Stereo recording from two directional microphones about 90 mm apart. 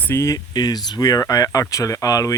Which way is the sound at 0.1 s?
35° left (ahead or behind).